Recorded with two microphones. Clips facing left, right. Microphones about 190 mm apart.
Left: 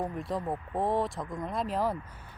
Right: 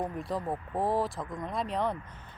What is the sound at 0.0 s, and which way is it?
Speech, centre (ahead or behind).